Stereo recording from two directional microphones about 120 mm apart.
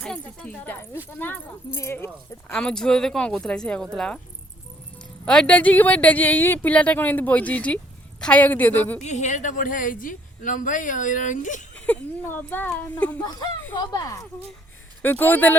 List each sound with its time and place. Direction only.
0.0 s speech: 10° left (ahead or behind)
2.5 s speech: 5° left (ahead or behind)
5.2 s speech: 10° left (ahead or behind)
9.0 s speech: 80° left
11.7 s speech: 10° left (ahead or behind)
13.1 s speech: 35° left (ahead or behind)
15.0 s speech: 15° left (ahead or behind)